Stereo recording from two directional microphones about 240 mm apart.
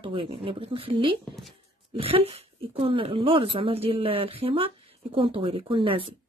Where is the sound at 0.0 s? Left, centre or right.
Right.